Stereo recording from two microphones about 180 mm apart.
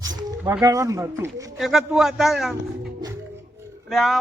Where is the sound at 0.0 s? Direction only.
20° right (ahead or behind).